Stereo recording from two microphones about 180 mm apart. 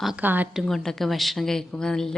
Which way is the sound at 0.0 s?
5° right (ahead or behind).